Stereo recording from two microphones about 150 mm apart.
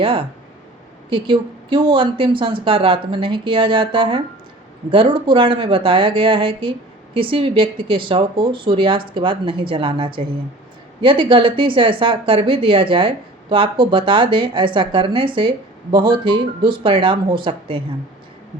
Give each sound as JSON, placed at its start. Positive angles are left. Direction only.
{"t": 0.0, "sound": "a woman's voice", "side_deg": -35}